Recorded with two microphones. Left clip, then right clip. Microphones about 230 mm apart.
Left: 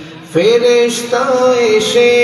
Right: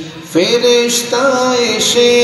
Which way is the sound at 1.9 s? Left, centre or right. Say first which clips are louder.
Right 2 dB; right.